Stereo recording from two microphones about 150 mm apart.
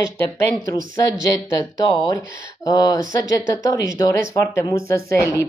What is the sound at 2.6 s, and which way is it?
Speech, 25° left (ahead or behind).